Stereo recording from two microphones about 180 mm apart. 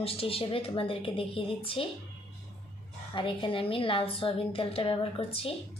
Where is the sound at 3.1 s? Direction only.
30° left (ahead or behind).